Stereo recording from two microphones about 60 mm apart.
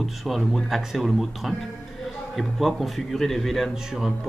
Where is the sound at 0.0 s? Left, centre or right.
Centre.